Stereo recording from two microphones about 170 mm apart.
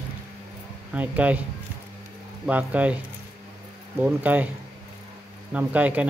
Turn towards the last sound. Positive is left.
turn(degrees=-10)  # may be behind; listen again after turning